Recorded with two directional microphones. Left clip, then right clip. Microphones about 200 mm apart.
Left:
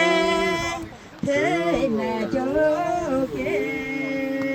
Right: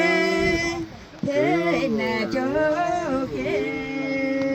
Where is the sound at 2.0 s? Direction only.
30° right (ahead or behind).